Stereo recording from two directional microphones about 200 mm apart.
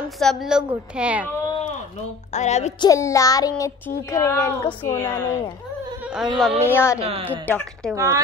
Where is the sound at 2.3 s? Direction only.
35° left (ahead or behind).